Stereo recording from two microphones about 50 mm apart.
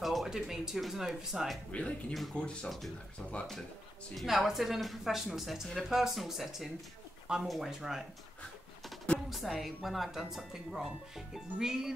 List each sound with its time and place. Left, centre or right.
0.0 s speech: centre
1.7 s speech: left
4.1 s speech: centre
9.3 s speech: centre